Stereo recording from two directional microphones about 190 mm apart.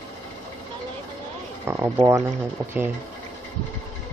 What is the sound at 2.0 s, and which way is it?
Speech, 15° right (ahead or behind).